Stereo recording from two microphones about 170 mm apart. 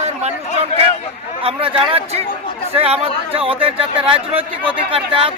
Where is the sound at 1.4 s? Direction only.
30° right (ahead or behind).